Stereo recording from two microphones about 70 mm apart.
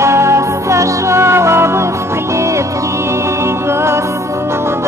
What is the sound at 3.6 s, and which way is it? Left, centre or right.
Music, right.